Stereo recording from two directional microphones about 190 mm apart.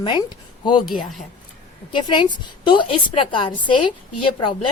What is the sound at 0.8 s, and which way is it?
Speech, centre (ahead or behind).